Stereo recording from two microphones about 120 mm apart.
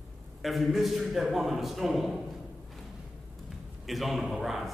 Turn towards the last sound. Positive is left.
turn(degrees=0)  # may be behind; listen again after turning